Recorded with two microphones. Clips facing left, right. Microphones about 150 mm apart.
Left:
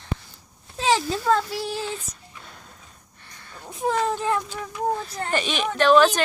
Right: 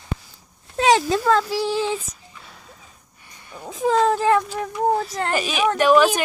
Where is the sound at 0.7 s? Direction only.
65° right (ahead or behind); by 2.0 s 90° right.